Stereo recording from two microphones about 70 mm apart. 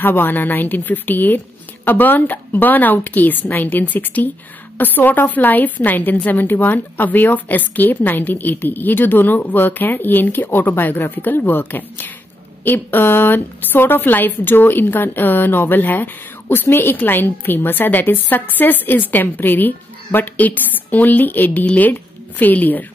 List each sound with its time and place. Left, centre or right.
0.0 s a woman's voice: left